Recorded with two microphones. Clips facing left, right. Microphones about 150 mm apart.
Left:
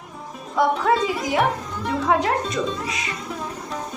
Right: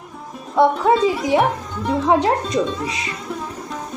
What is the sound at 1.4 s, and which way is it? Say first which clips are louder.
Speech: right 3 dB; centre (ahead or behind).